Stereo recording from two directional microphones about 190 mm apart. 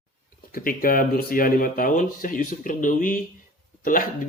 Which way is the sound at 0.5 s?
50° left (ahead or behind).